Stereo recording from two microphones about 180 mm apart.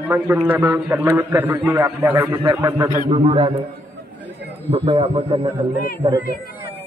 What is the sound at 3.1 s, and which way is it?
Speech, 30° right (ahead or behind).